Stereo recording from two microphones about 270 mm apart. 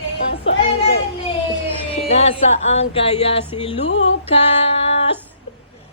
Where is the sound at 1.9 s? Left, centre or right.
Left.